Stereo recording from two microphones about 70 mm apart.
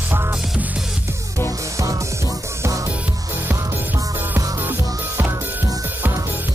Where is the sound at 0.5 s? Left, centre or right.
Right.